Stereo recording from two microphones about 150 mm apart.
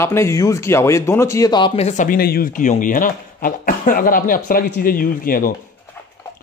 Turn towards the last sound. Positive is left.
turn(degrees=70)  # may be behind; listen again after turning